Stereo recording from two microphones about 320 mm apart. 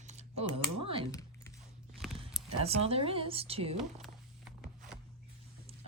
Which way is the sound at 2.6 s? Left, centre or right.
Centre.